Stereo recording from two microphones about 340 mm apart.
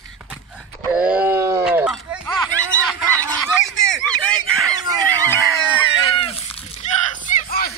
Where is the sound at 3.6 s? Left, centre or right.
Centre.